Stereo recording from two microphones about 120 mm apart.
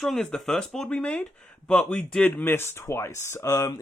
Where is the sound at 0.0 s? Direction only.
5° left (ahead or behind).